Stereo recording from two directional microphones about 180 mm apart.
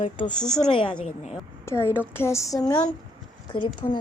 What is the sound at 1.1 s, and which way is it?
Speech, 40° left (ahead or behind).